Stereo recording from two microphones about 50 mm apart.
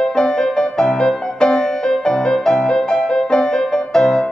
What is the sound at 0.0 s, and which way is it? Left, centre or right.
Music, centre.